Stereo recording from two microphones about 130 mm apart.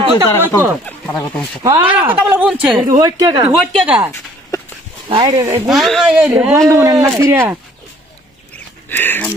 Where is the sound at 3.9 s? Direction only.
10° right (ahead or behind).